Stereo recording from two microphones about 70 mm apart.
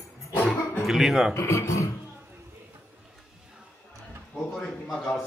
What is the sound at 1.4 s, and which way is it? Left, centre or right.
Speech, left.